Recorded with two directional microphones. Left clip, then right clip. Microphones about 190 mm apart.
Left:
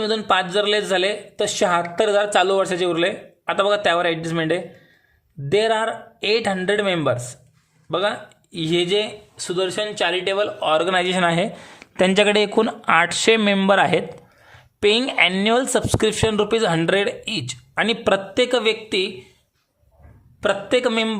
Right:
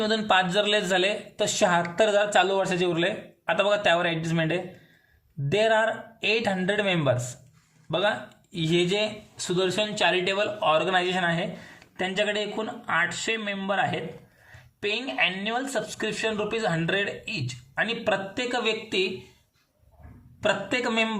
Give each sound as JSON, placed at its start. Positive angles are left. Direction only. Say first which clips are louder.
{"t": 0.0, "sound": "a man's voice", "louder": "left 3 dB", "side_deg": 15}
{"t": 20.4, "sound": "speech", "louder": "left 6 dB", "side_deg": 25}